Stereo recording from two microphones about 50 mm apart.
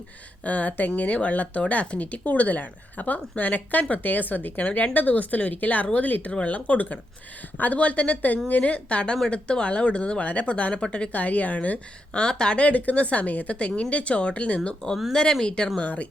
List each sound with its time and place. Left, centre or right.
0.4 s speech: left
12.2 s speech: centre
15.1 s speech: centre